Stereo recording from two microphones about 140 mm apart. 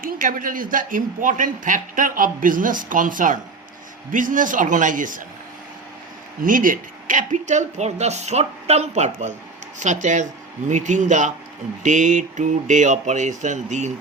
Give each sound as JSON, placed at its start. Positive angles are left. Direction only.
{"t": 0.0, "sound": "speech", "side_deg": -75}
{"t": 6.4, "sound": "speech", "side_deg": -75}